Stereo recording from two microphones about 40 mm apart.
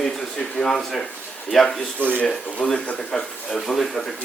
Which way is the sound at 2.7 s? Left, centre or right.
Left.